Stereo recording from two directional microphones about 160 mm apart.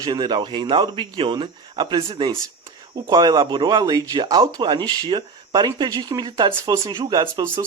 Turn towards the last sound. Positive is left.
turn(degrees=-25)  # may be behind; listen again after turning